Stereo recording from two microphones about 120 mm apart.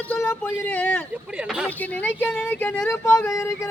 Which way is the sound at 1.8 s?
15° left (ahead or behind).